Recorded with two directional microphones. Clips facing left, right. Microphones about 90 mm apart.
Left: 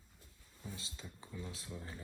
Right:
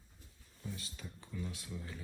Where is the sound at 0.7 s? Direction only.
25° left (ahead or behind).